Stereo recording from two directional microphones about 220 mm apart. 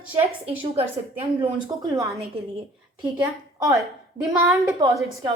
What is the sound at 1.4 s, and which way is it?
Speech, 15° right (ahead or behind).